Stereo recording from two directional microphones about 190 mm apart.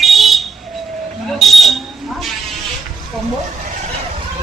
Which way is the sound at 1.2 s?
Centre (ahead or behind).